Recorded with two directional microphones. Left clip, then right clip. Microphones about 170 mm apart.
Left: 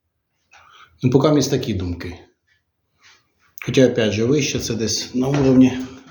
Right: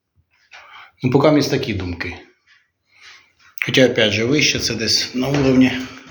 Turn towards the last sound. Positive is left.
turn(degrees=45)  # may be behind; listen again after turning